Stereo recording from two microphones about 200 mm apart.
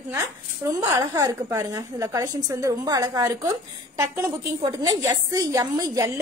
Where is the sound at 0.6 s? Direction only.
15° right (ahead or behind).